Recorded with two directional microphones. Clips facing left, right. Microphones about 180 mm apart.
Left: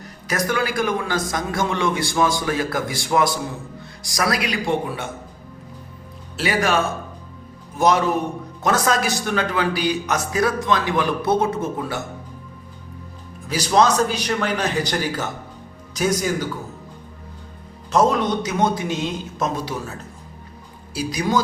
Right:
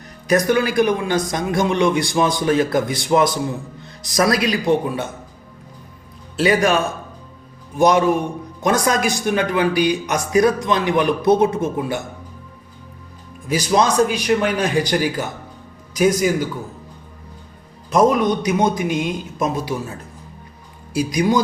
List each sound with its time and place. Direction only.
0.3 s a man's voice: 20° right (ahead or behind)
6.4 s a man's voice: 20° right (ahead or behind)
7.8 s a man's voice: 15° right (ahead or behind)
13.5 s a man's voice: 10° right (ahead or behind)
17.9 s a man's voice: 10° right (ahead or behind)
20.9 s a man's voice: 15° right (ahead or behind)